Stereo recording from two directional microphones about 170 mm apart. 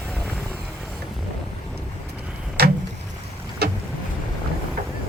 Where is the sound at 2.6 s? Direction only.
70° right (ahead or behind).